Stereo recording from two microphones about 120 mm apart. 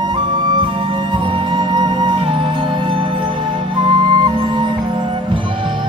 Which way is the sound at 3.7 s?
40° right (ahead or behind).